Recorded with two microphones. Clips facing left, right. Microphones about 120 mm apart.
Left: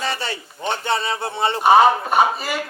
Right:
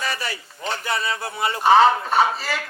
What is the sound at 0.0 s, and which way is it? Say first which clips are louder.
A man's voice: left 2 dB; 30° left (ahead or behind).